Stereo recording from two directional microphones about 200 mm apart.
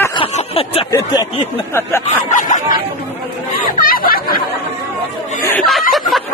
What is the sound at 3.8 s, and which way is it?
Chatter, 45° left (ahead or behind).